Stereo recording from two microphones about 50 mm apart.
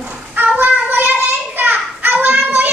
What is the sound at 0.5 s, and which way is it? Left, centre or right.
Child singing, right.